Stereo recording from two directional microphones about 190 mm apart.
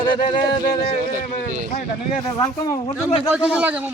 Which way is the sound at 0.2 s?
45° left (ahead or behind).